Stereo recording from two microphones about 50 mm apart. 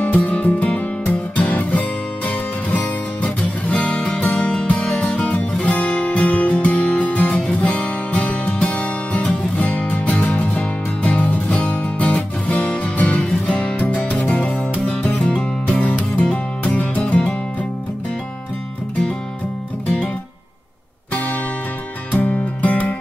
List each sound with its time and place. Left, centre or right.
0.0 s music: left; by 4.6 s centre
4.6 s music: left
5.7 s guitar: left
6.5 s music: left
21.1 s music: left